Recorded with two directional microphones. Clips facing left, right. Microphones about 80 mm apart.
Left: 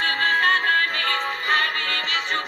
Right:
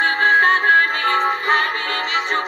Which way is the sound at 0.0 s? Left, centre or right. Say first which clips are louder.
Right 6 dB; right.